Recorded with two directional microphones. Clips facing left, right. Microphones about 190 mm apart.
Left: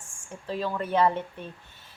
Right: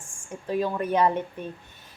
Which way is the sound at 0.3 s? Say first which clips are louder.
Right 4 dB; 15° right (ahead or behind).